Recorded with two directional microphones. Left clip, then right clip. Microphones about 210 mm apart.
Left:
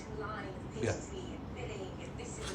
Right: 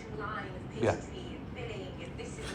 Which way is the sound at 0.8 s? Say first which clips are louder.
Right 6 dB; centre (ahead or behind).